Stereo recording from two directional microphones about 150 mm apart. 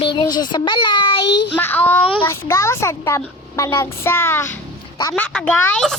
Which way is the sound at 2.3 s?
20° left (ahead or behind).